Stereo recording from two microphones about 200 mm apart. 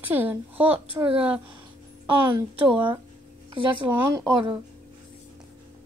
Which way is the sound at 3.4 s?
25° right (ahead or behind).